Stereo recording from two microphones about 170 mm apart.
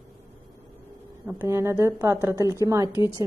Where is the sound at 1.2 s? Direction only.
15° right (ahead or behind).